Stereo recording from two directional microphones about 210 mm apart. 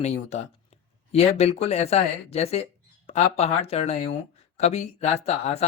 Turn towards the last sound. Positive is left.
turn(degrees=30)  # may be behind; listen again after turning